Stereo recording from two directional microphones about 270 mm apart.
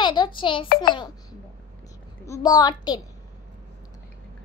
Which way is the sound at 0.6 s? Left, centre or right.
Left.